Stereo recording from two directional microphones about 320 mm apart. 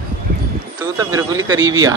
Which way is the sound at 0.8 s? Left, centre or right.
Centre.